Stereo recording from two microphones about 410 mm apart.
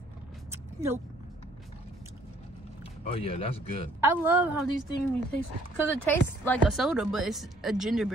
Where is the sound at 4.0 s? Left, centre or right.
Centre.